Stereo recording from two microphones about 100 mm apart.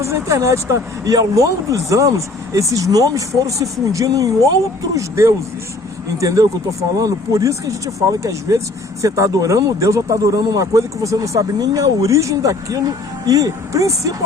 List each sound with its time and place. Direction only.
0.0 s speech: 30° right (ahead or behind)